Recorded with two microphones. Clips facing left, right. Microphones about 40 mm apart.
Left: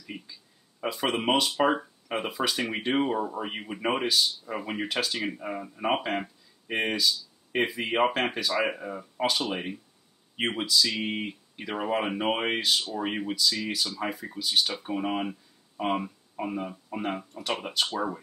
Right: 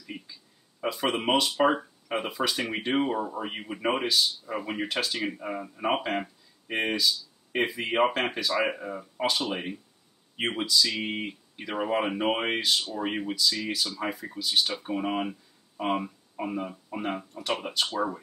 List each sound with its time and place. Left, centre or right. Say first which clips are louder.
0.0 s speech: even; centre